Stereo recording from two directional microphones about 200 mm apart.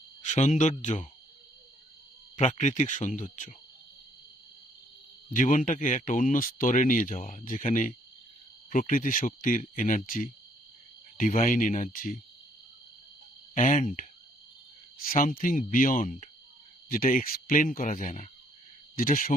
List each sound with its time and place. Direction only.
0.3 s speech: 35° left (ahead or behind)
2.3 s speech: 35° left (ahead or behind)
5.3 s speech: 40° left (ahead or behind)
13.6 s speech: 40° left (ahead or behind)